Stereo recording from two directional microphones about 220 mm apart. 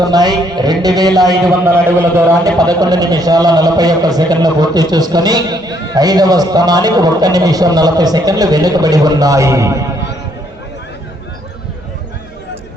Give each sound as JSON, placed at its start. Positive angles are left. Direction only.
{"t": 0.0, "sound": "a man's voice", "side_deg": -20}